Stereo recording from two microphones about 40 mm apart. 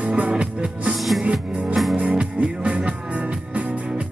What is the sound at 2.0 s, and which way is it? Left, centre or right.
Music, right.